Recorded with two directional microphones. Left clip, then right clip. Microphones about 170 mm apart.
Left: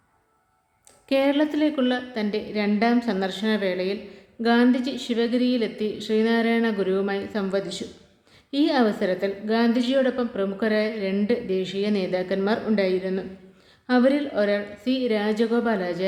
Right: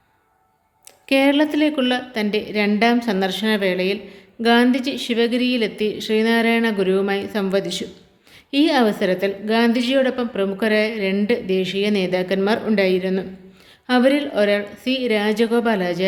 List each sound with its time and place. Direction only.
1.0 s a woman's voice: 15° right (ahead or behind)